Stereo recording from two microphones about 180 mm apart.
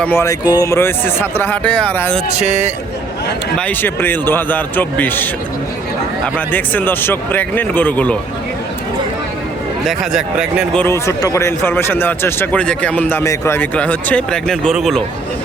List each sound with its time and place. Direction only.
0.0 s speech: 15° left (ahead or behind)
2.3 s speech: 40° right (ahead or behind)
3.6 s speech: 10° left (ahead or behind)
9.8 s speech: centre (ahead or behind)
10.8 s speech: 15° left (ahead or behind)